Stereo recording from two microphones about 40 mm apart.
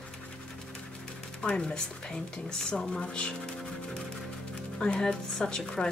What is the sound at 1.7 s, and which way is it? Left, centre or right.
Speech, centre.